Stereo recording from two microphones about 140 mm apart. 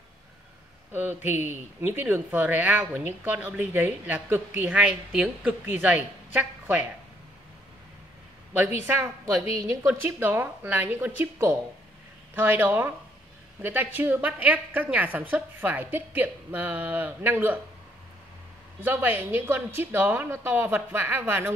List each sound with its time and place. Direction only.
0.9 s speech: 15° right (ahead or behind)
8.8 s a woman's voice: 20° right (ahead or behind)
9.8 s speech: 15° right (ahead or behind)
18.8 s speech: 15° right (ahead or behind)